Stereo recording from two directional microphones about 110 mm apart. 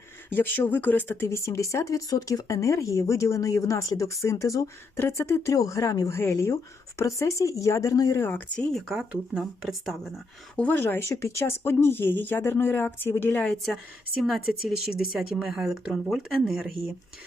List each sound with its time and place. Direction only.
0.3 s speech: 15° left (ahead or behind)
8.5 s speech: centre (ahead or behind)
10.6 s speech: 15° left (ahead or behind); by 16.7 s 5° right (ahead or behind)